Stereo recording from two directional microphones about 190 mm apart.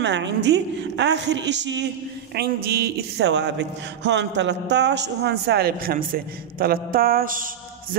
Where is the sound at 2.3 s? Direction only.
55° right (ahead or behind).